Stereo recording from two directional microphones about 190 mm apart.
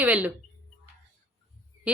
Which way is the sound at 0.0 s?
10° right (ahead or behind).